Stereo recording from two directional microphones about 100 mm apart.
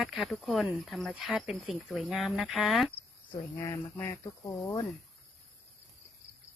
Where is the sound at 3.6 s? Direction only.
30° left (ahead or behind).